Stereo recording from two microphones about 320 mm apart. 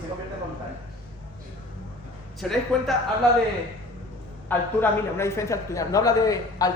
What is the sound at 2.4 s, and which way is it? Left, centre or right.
Speech, centre.